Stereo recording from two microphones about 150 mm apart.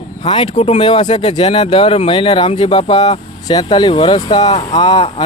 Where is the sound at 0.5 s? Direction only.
45° left (ahead or behind).